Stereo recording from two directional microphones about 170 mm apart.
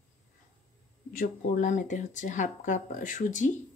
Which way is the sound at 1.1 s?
50° left (ahead or behind).